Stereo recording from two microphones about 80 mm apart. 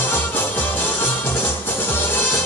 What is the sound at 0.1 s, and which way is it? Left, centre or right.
Music, left.